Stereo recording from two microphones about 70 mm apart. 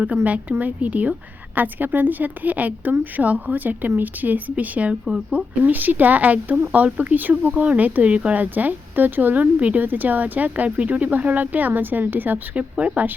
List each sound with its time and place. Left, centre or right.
0.3 s speech: right
5.0 s speech: centre
5.6 s speech: right
12.7 s speech: centre